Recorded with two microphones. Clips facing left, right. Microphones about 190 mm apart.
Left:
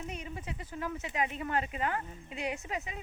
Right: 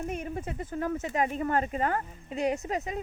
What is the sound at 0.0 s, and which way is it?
Speech, 50° right (ahead or behind).